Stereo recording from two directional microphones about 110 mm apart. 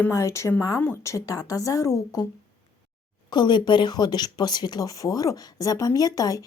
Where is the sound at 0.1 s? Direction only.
25° left (ahead or behind).